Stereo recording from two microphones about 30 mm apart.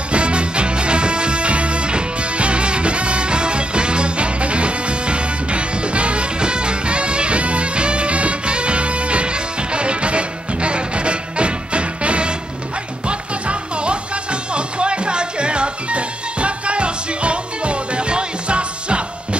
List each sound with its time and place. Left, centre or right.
0.1 s music: right